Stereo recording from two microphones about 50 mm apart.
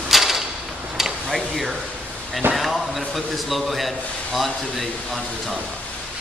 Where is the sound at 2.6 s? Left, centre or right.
Centre.